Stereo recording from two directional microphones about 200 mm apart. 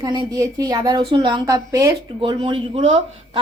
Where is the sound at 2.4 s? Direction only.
30° right (ahead or behind).